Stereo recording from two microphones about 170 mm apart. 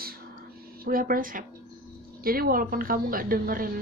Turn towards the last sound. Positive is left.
turn(degrees=-55)  # may be behind; listen again after turning